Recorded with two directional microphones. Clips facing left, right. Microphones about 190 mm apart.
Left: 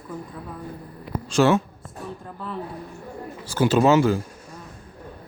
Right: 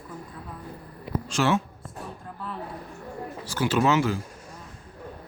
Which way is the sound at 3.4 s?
50° left (ahead or behind).